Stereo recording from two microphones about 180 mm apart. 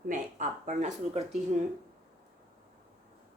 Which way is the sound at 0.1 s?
45° right (ahead or behind).